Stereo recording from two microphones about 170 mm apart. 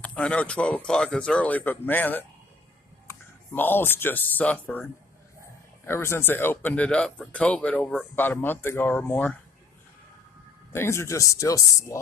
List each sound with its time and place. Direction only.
0.0 s speech: 5° left (ahead or behind)
5.9 s speech: 15° left (ahead or behind)
10.7 s speech: 15° left (ahead or behind)